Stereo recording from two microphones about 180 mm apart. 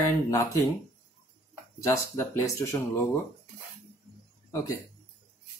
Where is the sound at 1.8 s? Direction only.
15° left (ahead or behind).